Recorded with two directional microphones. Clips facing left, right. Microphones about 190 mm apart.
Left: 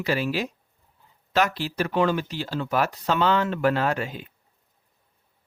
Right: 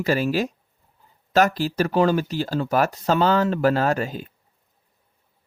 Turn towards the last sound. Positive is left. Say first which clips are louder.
# right 3 dB
turn(degrees=-40)  # may be behind; listen again after turning